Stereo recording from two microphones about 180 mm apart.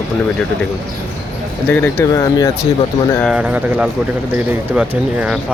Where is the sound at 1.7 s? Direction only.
15° left (ahead or behind).